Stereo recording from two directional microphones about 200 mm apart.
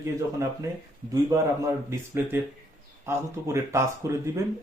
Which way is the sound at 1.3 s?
15° right (ahead or behind).